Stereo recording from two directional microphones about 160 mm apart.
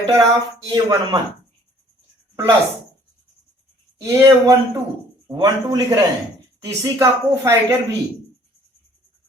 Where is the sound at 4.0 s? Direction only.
15° right (ahead or behind).